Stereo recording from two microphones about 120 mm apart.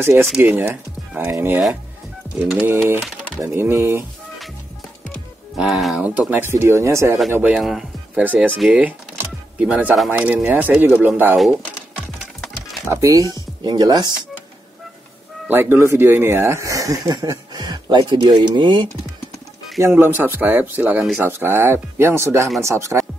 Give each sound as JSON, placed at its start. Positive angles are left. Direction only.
{"t": 0.0, "sound": "speech", "side_deg": -20}
{"t": 2.9, "sound": "speech", "side_deg": -20}
{"t": 5.6, "sound": "speech", "side_deg": 0}
{"t": 5.9, "sound": "speech", "side_deg": -10}
{"t": 7.5, "sound": "speech", "side_deg": -5}
{"t": 9.2, "sound": "music", "side_deg": -10}
{"t": 10.1, "sound": "speech", "side_deg": -15}
{"t": 12.9, "sound": "speech", "side_deg": -25}
{"t": 15.4, "sound": "speech", "side_deg": -20}
{"t": 19.8, "sound": "speech", "side_deg": -20}